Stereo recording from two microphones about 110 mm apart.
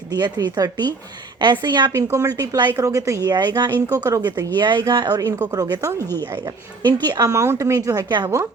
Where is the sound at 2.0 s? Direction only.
25° right (ahead or behind).